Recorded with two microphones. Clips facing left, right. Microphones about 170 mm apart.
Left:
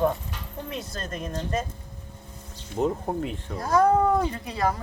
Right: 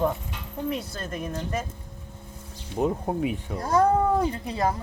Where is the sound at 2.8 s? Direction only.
5° right (ahead or behind).